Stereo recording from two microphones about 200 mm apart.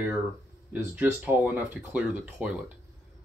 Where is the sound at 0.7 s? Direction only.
5° right (ahead or behind).